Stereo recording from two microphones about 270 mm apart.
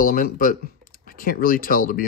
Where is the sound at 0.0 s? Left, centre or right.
Left.